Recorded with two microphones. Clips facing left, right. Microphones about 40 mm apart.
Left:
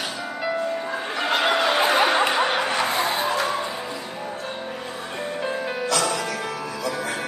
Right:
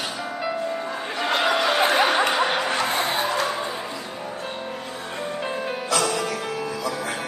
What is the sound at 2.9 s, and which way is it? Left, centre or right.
Music, right.